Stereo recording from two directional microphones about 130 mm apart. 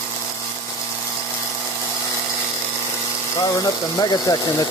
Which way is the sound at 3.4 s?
30° left (ahead or behind).